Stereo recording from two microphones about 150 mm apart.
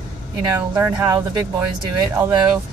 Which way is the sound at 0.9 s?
25° right (ahead or behind).